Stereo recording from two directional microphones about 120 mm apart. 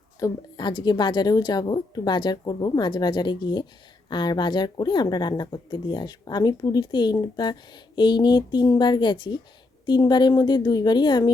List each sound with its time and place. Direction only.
0.2 s a woman's voice: 40° left (ahead or behind)